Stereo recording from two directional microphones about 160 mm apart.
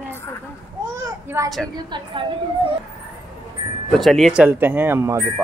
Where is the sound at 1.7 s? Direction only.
30° right (ahead or behind).